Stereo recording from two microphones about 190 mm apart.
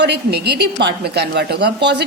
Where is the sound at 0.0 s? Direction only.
60° right (ahead or behind).